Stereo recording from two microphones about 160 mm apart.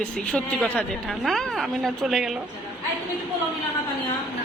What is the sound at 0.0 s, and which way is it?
A woman's voice, 5° left (ahead or behind).